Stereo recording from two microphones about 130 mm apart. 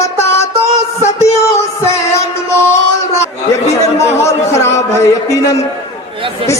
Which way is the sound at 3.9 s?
20° left (ahead or behind).